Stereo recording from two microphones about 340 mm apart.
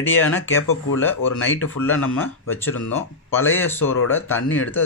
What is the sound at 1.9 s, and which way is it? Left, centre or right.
Speech, left.